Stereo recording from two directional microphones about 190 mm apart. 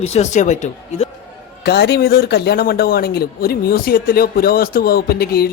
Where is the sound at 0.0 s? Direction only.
35° left (ahead or behind).